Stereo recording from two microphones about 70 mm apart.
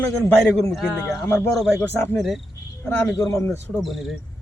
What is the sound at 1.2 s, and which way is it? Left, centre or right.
Speech, left.